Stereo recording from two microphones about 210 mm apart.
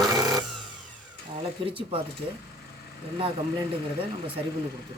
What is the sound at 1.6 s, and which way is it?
Speech, 25° right (ahead or behind).